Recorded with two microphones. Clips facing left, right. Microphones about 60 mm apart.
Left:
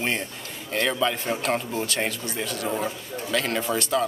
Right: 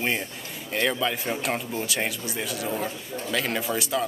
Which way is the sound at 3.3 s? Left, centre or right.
Centre.